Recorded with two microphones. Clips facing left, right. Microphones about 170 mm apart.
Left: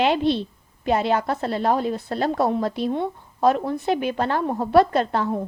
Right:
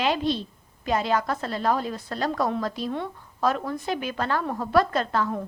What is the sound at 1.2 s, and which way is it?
A woman's voice, 35° left (ahead or behind).